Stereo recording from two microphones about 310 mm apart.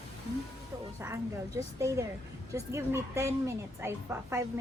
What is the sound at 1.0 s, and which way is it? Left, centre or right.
A woman's voice, centre.